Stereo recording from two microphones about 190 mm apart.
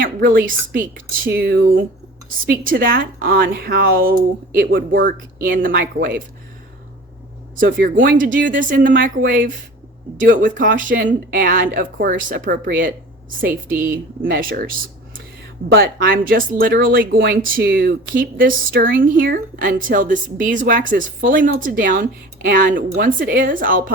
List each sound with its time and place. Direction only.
0.0 s speech: 50° right (ahead or behind)
7.6 s speech: 50° right (ahead or behind)
15.7 s speech: 50° right (ahead or behind)